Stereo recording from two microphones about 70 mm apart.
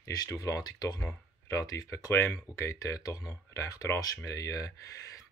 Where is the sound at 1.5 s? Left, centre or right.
Left.